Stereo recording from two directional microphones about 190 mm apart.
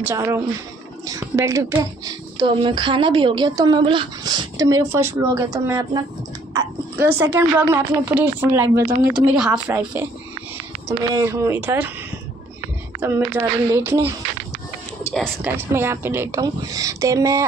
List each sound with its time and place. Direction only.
0.0 s speech: 15° right (ahead or behind)
8.8 s speech: 55° right (ahead or behind)
9.5 s speech: 10° right (ahead or behind)
13.0 s speech: 10° right (ahead or behind)
15.4 s speech: 10° right (ahead or behind)